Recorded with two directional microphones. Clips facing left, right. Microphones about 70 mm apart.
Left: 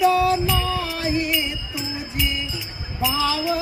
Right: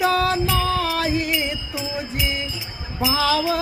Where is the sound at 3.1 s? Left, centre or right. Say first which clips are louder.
Right 3 dB; right.